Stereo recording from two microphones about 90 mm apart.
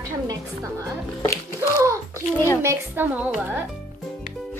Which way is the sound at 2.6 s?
25° right (ahead or behind).